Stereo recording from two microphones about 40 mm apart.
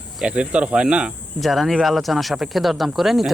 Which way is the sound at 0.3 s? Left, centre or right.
Right.